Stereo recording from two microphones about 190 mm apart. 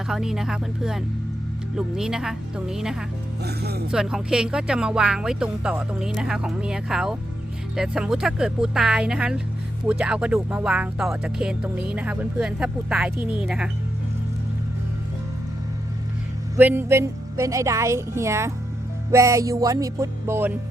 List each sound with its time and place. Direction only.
0.1 s speech: 5° right (ahead or behind)
3.4 s speech: 55° right (ahead or behind)
3.9 s speech: 5° right (ahead or behind)
16.6 s a woman's voice: 10° right (ahead or behind)